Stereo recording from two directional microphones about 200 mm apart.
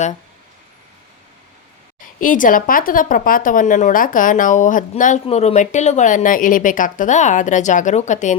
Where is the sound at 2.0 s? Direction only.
40° left (ahead or behind).